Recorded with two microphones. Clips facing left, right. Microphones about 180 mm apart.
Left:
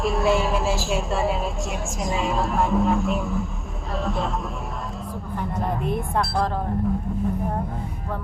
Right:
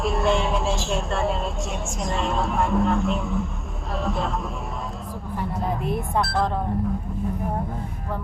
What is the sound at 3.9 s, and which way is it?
Speech, centre (ahead or behind).